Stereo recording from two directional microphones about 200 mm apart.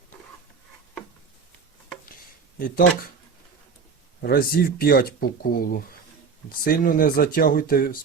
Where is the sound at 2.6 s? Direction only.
45° left (ahead or behind).